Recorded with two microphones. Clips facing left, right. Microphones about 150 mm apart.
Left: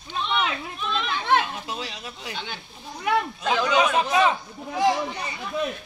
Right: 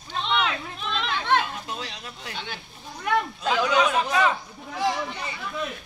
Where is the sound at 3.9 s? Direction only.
15° left (ahead or behind).